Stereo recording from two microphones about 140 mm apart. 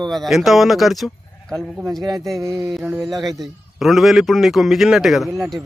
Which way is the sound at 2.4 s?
20° right (ahead or behind).